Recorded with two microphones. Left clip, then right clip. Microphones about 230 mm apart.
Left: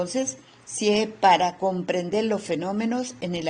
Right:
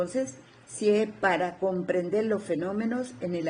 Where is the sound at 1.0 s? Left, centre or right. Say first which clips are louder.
Left 7 dB; left.